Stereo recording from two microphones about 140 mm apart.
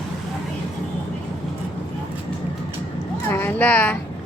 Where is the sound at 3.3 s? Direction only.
15° left (ahead or behind).